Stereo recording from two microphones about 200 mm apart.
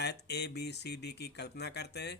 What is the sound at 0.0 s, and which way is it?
Speech, 55° left (ahead or behind).